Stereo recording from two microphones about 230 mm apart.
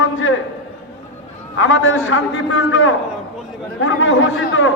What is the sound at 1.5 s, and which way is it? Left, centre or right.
A man's voice, left.